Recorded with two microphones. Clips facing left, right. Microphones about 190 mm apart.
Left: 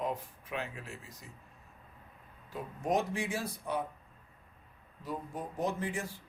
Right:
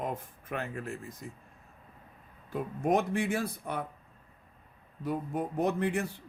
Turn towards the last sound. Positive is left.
turn(degrees=-60)  # may be behind; listen again after turning